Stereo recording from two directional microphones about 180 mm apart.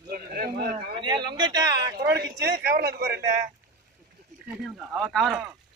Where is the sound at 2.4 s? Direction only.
60° right (ahead or behind).